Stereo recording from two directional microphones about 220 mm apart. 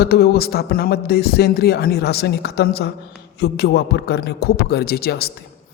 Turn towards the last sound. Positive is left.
turn(degrees=45)  # may be behind; listen again after turning